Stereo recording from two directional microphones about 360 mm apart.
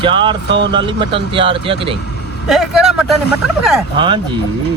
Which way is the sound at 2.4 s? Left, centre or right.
Centre.